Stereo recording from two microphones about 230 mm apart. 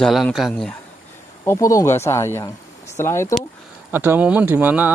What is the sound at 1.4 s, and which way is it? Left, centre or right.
Speech, centre.